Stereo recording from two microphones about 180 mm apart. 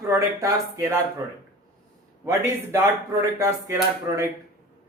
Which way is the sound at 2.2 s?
15° right (ahead or behind).